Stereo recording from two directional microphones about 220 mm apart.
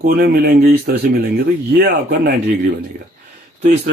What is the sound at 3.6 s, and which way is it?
Speech, 50° right (ahead or behind).